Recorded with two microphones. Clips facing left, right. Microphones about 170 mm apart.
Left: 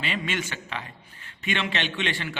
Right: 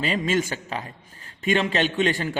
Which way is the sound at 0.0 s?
40° right (ahead or behind).